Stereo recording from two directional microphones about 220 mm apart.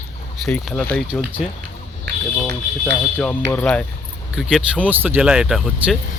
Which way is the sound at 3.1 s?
5° left (ahead or behind).